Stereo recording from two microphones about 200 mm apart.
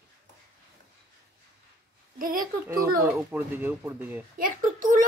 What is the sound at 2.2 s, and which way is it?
Speech, 45° right (ahead or behind).